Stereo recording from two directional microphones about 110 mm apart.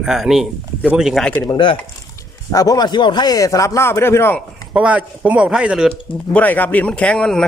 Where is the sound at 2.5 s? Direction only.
35° left (ahead or behind).